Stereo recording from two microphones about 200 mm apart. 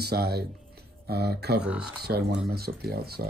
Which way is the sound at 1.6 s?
5° right (ahead or behind).